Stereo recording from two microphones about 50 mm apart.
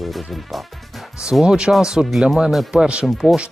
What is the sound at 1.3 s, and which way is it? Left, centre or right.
Speech, centre.